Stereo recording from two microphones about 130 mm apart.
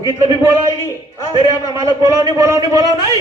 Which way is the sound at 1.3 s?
30° right (ahead or behind).